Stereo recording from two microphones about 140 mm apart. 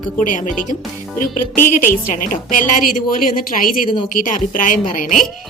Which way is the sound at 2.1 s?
75° left (ahead or behind).